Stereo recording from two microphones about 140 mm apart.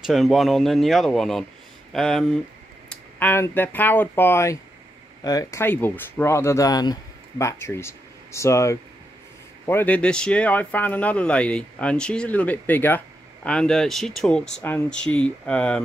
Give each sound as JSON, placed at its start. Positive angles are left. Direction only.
{"t": 0.0, "sound": "speech", "side_deg": 0}